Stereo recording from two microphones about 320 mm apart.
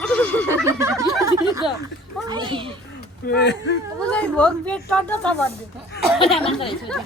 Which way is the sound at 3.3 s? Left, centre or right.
Left.